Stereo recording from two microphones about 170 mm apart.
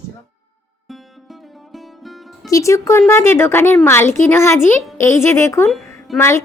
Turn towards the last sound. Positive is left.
turn(degrees=15)  # may be behind; listen again after turning